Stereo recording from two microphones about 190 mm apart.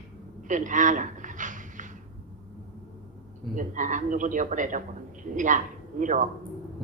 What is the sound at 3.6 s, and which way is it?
A man's voice, 40° right (ahead or behind).